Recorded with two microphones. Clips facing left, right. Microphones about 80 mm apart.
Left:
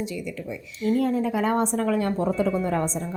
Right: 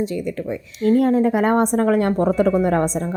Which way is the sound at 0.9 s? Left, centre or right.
Right.